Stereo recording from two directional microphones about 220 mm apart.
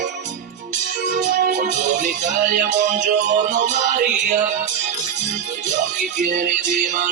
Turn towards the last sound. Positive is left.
turn(degrees=-40)  # may be behind; listen again after turning